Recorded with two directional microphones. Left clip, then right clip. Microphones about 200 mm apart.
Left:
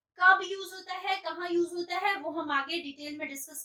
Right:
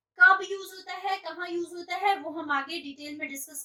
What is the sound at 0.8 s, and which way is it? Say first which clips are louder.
A woman's voice: right 1 dB; 5° left (ahead or behind).